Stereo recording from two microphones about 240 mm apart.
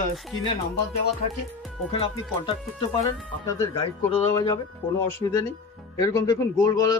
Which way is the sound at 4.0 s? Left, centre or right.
Centre.